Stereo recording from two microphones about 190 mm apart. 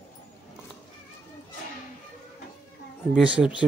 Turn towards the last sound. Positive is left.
turn(degrees=-5)  # may be behind; listen again after turning